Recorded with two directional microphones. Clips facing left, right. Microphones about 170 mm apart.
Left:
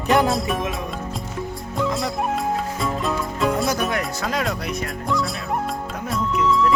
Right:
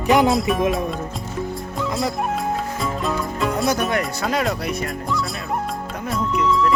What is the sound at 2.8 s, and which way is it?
Music, centre (ahead or behind).